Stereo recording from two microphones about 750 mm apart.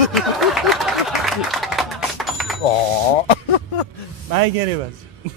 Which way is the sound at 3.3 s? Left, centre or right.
Left.